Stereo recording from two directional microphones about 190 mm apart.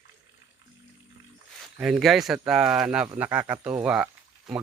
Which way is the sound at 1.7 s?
5° right (ahead or behind).